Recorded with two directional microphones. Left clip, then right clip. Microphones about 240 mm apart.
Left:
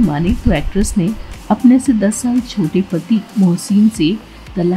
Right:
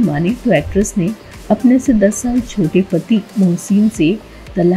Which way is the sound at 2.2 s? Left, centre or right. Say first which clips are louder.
Even; centre.